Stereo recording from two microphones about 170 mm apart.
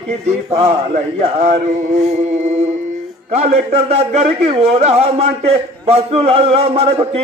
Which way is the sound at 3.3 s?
40° right (ahead or behind).